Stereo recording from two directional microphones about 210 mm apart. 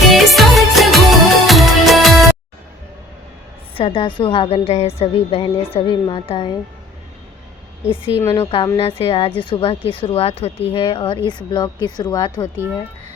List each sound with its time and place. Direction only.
0.1 s music: centre (ahead or behind)
3.8 s a woman's voice: 25° left (ahead or behind)
8.2 s a woman's voice: 15° left (ahead or behind)